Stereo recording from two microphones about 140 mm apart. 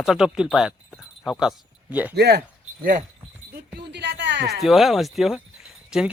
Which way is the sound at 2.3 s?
85° right.